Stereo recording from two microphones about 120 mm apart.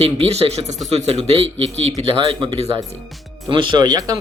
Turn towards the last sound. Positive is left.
turn(degrees=-35)  # may be behind; listen again after turning